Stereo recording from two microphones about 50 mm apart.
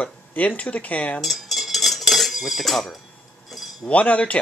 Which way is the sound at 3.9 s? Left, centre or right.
Left.